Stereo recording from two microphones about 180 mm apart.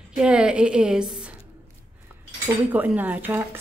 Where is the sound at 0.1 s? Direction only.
5° right (ahead or behind).